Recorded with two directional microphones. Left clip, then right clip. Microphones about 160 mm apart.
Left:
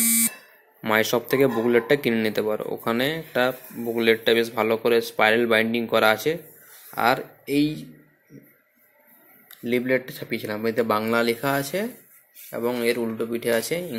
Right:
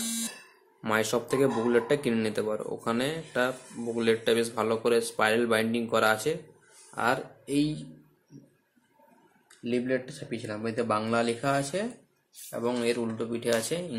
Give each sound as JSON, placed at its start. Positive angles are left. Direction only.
{"t": 0.8, "sound": "speech", "side_deg": 20}
{"t": 9.7, "sound": "speech", "side_deg": 25}